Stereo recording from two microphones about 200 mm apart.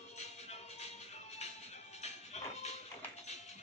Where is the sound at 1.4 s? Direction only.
35° left (ahead or behind).